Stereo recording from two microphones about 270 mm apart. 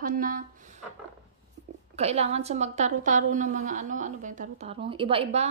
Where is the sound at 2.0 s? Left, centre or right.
Right.